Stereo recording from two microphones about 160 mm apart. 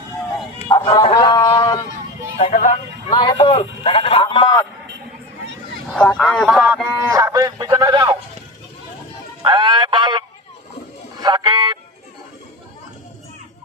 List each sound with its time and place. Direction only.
0.9 s speech: 30° left (ahead or behind)
2.4 s speech: 50° left (ahead or behind)
3.1 s a sound: 30° left (ahead or behind)
5.9 s speech: 5° left (ahead or behind)
6.5 s speech: 5° right (ahead or behind)
7.1 s speech: 20° right (ahead or behind)
9.4 s a sound: 30° right (ahead or behind)